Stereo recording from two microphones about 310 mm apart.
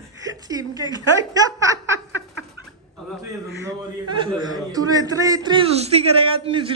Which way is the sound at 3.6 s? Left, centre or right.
Centre.